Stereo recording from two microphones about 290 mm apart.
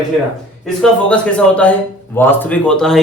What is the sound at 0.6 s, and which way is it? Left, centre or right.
A man's voice, centre.